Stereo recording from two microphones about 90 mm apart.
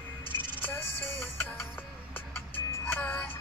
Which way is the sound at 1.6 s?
25° left (ahead or behind).